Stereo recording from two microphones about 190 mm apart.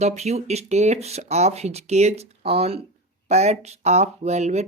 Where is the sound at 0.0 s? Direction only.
35° right (ahead or behind).